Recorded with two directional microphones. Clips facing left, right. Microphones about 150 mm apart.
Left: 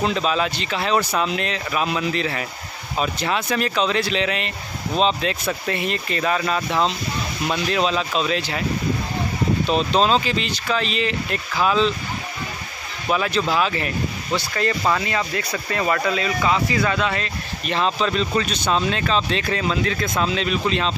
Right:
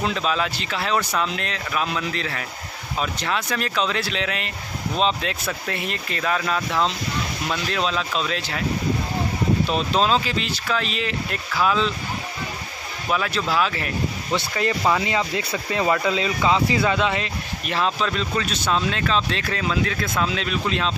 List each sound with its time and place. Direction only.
0.0 s speech: centre (ahead or behind)
9.7 s speech: centre (ahead or behind)
13.1 s speech: centre (ahead or behind)
14.5 s speech: 10° right (ahead or behind)
17.6 s speech: 5° right (ahead or behind)